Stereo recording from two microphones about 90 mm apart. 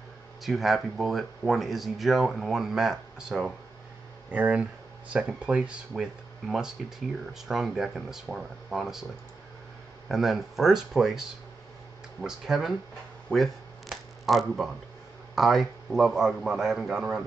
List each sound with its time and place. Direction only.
0.4 s speech: centre (ahead or behind)
10.0 s speech: 5° right (ahead or behind)
13.3 s camera: centre (ahead or behind)
15.3 s speech: centre (ahead or behind)